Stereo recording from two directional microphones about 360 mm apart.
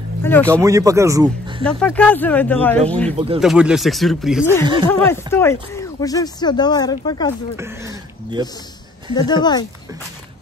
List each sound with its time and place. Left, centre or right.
0.2 s speech: centre
0.5 s speech: centre
1.6 s speech: centre
3.1 s speech: centre
3.3 s speech: centre
7.5 s speech: centre
9.1 s speech: centre